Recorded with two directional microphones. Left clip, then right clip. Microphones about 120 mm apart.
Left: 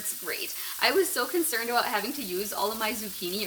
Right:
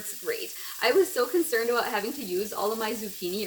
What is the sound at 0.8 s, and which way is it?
Speech, 20° left (ahead or behind).